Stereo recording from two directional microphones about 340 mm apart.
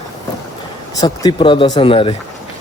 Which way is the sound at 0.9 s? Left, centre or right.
Centre.